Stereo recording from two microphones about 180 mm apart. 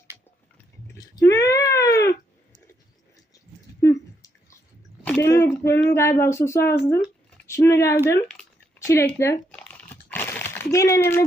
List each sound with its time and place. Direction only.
0.9 s cat: 20° left (ahead or behind)
3.8 s a sound: 15° left (ahead or behind)
5.0 s speech: 10° left (ahead or behind)
8.8 s crumpling: 15° left (ahead or behind)